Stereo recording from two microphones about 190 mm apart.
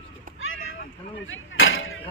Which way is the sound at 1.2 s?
90° left.